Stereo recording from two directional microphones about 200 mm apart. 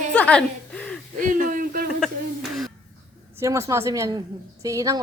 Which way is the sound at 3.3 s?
15° right (ahead or behind).